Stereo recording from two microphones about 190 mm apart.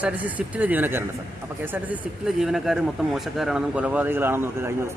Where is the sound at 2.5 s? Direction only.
Centre (ahead or behind).